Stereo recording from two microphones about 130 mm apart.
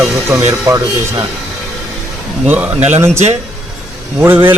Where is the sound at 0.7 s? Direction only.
20° right (ahead or behind).